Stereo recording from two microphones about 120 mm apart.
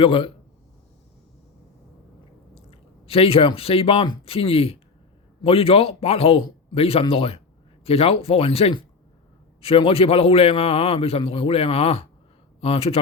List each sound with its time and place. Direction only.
0.0 s speech: 45° left (ahead or behind)
2.6 s a man's voice: 55° left (ahead or behind)